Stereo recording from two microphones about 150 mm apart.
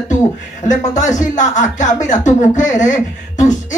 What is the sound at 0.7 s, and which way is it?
Speech, 55° left (ahead or behind).